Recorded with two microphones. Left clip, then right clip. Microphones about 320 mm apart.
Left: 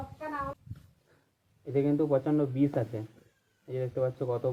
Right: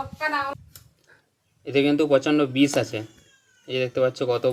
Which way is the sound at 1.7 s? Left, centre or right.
Right.